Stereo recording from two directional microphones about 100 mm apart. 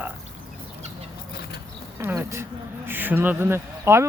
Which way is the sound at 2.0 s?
25° right (ahead or behind).